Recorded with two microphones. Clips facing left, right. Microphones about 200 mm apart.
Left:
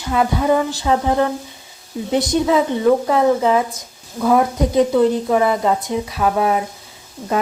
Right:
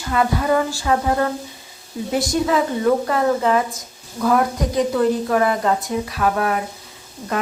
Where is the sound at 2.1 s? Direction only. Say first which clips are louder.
Left 3 dB; 20° left (ahead or behind).